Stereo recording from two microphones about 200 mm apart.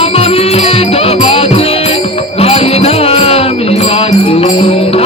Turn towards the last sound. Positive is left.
turn(degrees=30)  # may be behind; listen again after turning